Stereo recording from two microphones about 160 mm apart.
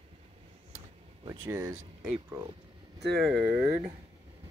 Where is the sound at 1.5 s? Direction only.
15° right (ahead or behind).